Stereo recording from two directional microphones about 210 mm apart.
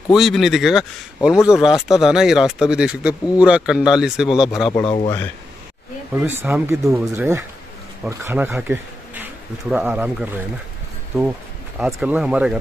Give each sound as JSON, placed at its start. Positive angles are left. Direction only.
{"t": 0.1, "sound": "speech", "side_deg": 0}
{"t": 4.8, "sound": "speech", "side_deg": 25}
{"t": 6.1, "sound": "speech", "side_deg": -10}
{"t": 11.8, "sound": "speech", "side_deg": -5}